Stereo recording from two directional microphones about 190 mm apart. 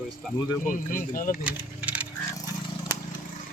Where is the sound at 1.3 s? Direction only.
5° right (ahead or behind).